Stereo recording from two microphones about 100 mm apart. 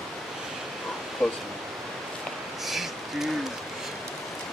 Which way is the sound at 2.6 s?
Centre (ahead or behind).